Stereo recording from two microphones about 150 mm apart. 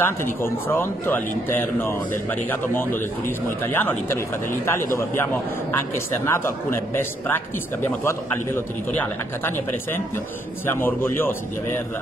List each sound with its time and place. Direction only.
0.0 s a man's voice: 15° left (ahead or behind)
10.7 s a man's voice: 15° left (ahead or behind)